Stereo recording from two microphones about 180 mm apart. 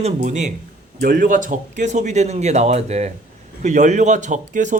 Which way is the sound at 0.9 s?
55° right (ahead or behind).